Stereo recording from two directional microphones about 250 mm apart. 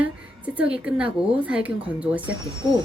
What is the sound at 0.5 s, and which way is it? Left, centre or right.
Speech, centre.